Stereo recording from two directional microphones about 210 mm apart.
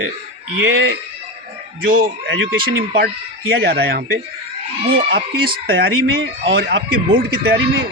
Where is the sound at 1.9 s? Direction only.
40° right (ahead or behind).